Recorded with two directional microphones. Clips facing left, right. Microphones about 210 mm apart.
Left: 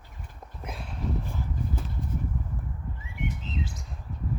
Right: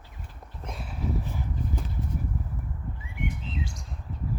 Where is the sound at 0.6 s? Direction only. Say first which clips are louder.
Even; centre (ahead or behind).